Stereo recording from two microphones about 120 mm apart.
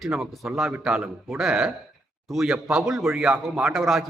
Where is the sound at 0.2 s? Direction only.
Centre (ahead or behind).